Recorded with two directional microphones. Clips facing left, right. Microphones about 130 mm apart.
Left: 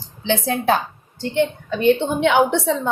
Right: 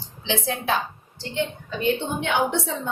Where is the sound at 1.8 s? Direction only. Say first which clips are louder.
Left 8 dB; 70° left (ahead or behind).